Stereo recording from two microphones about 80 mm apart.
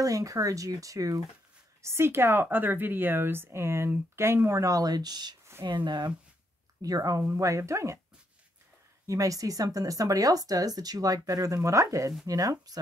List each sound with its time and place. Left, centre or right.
0.0 s speech: right
1.8 s speech: right
6.8 s speech: right
9.0 s speech: right